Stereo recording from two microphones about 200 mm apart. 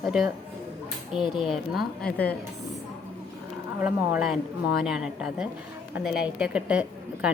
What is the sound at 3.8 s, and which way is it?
A woman's voice, 5° right (ahead or behind).